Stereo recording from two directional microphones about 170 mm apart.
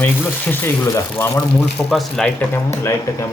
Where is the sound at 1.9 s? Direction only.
Centre (ahead or behind).